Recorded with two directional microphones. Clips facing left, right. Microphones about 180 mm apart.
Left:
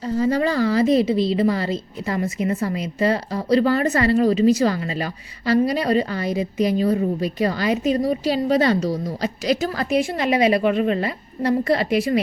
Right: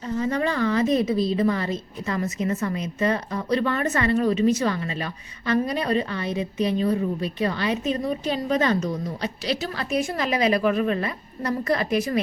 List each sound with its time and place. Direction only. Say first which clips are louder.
0.0 s a woman's voice: left 4 dB; 35° left (ahead or behind)
10.2 s a woman's voice: left 3 dB; 25° left (ahead or behind)